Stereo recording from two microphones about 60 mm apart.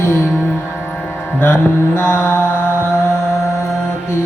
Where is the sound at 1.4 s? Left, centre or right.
Left.